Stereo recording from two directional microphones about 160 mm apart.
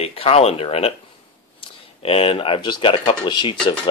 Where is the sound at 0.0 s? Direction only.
35° left (ahead or behind).